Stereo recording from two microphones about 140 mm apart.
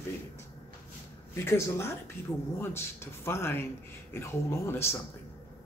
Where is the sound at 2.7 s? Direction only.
15° left (ahead or behind).